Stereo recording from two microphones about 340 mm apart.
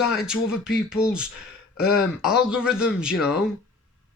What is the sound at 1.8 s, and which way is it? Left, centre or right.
Speech, left.